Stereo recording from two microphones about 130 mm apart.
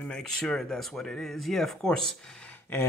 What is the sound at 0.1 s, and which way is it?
Speech, 5° left (ahead or behind).